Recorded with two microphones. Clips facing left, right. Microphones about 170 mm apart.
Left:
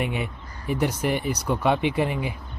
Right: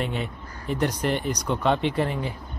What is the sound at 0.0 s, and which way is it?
Speech, 10° left (ahead or behind).